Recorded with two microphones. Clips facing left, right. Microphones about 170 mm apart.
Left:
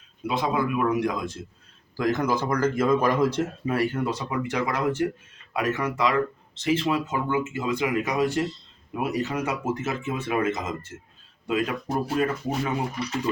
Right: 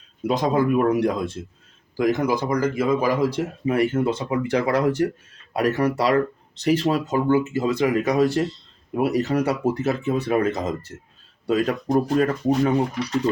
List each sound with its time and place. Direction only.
0.3 s speech: 40° right (ahead or behind)
2.0 s speech: 15° right (ahead or behind); by 12.7 s 40° right (ahead or behind)